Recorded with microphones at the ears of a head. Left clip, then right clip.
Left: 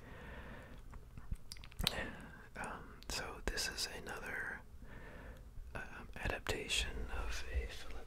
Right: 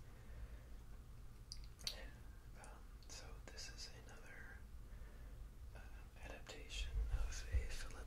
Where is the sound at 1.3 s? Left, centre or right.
Left.